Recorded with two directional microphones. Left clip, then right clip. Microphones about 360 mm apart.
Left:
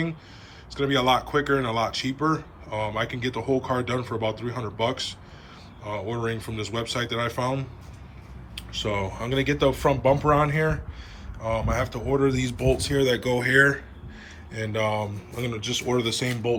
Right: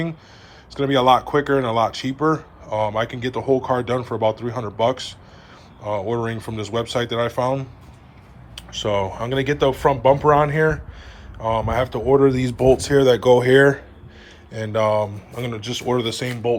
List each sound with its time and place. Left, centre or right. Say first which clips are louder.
0.7 s speech: right 6 dB; centre